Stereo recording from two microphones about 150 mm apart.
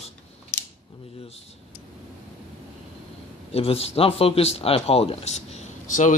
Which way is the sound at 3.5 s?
40° left (ahead or behind).